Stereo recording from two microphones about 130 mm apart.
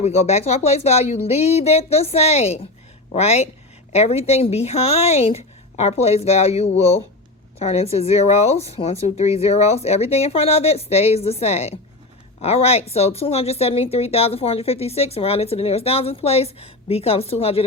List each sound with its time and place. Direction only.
0.0 s a woman's voice: 55° left (ahead or behind)